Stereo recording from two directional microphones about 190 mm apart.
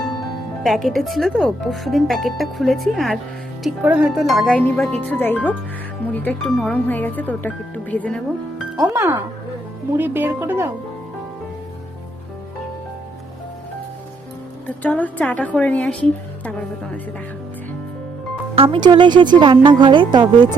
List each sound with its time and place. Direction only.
0.6 s speech: centre (ahead or behind)
8.9 s speech: 10° right (ahead or behind)
14.8 s speech: 10° left (ahead or behind)
18.5 s speech: 30° right (ahead or behind)